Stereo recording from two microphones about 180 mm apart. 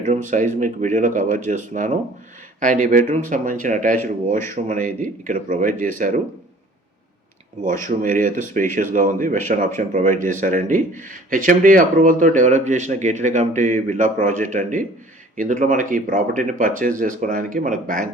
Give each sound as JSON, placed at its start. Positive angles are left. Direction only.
{"t": 0.0, "sound": "speech", "side_deg": -45}
{"t": 7.9, "sound": "speech", "side_deg": -45}